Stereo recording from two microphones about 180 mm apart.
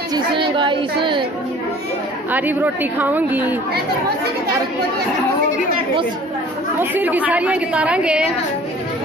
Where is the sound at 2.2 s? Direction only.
10° right (ahead or behind).